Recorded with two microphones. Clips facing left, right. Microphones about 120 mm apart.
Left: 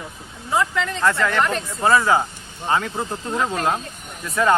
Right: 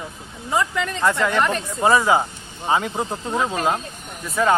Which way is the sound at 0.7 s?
15° right (ahead or behind).